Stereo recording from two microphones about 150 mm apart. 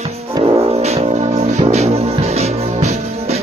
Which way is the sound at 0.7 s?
45° right (ahead or behind).